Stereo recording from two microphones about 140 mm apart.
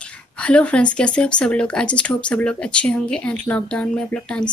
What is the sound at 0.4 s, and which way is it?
Speech, 10° left (ahead or behind).